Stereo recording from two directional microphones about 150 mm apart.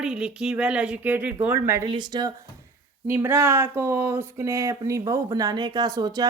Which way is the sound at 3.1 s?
15° right (ahead or behind).